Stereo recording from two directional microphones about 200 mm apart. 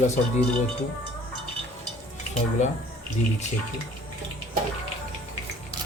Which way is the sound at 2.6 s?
35° left (ahead or behind).